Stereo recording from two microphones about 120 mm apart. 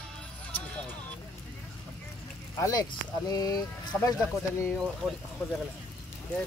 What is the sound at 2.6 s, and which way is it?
Speech, 30° left (ahead or behind).